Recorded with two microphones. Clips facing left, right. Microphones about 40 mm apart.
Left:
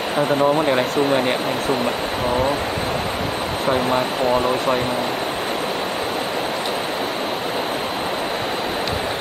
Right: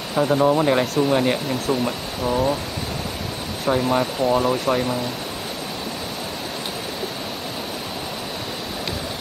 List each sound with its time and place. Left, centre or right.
0.4 s speech: centre
3.7 s speech: left